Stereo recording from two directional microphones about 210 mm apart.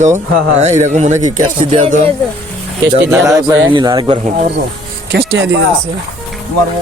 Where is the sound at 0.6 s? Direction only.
30° right (ahead or behind).